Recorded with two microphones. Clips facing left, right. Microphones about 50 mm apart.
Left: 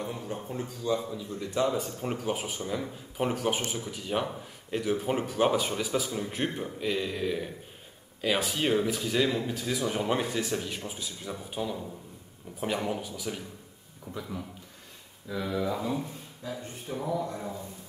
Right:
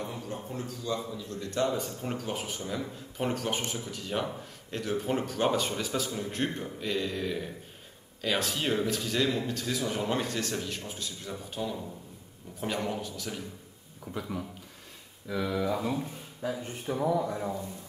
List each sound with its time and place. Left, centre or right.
0.4 s speech: centre
14.1 s speech: right
15.3 s speech: centre
16.9 s speech: right
17.2 s a man's voice: centre